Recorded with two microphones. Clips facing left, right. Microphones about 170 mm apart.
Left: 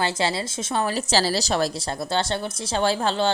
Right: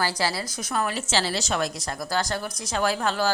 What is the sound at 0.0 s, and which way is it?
A woman's voice, 25° left (ahead or behind).